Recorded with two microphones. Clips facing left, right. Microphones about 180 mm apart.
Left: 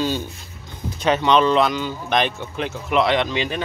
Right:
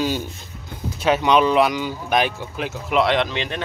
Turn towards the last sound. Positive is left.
turn(degrees=5)  # may be behind; listen again after turning